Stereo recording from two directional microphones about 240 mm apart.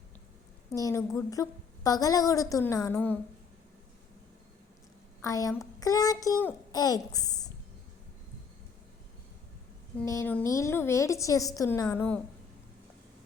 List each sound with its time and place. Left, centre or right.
0.7 s a woman's voice: centre
5.2 s a woman's voice: centre
10.1 s a woman's voice: centre